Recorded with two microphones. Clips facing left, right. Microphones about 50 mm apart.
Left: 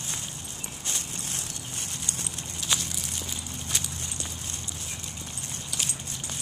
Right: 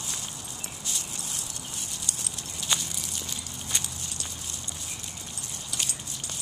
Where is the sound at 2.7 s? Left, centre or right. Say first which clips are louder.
Even; centre.